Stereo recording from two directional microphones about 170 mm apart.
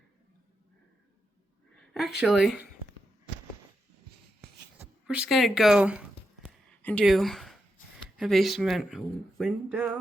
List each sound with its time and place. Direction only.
1.9 s speech: centre (ahead or behind)
5.0 s speech: 5° right (ahead or behind)
9.7 s a sound: 10° right (ahead or behind)